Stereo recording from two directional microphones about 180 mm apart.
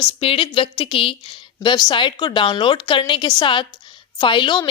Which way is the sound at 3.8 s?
25° left (ahead or behind).